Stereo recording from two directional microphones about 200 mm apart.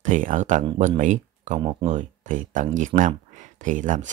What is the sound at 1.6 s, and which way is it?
Speech, 25° right (ahead or behind).